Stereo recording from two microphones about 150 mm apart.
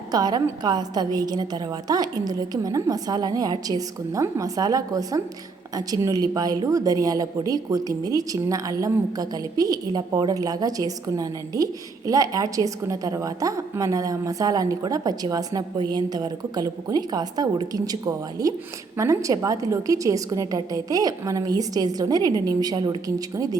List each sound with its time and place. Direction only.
0.1 s a woman's voice: 25° right (ahead or behind)